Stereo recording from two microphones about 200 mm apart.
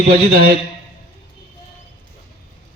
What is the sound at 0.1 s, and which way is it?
Speech, 50° right (ahead or behind).